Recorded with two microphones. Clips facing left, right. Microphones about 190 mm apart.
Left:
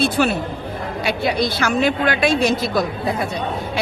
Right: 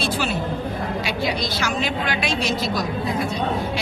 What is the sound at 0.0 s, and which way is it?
A woman's voice, 55° left (ahead or behind).